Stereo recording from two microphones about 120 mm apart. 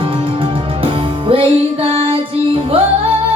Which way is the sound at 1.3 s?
50° right (ahead or behind).